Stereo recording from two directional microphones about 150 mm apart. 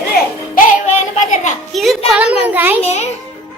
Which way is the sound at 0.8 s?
50° left (ahead or behind).